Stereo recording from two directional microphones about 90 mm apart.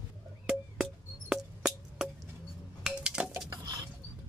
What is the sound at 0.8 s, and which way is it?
Wood block, 5° right (ahead or behind).